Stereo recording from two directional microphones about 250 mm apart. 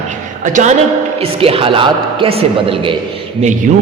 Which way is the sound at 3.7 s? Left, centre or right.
Right.